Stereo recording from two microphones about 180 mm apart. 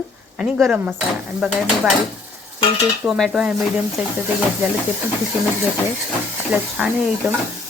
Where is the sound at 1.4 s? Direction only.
5° right (ahead or behind).